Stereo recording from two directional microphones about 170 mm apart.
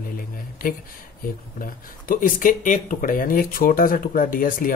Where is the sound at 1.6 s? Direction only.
55° left (ahead or behind).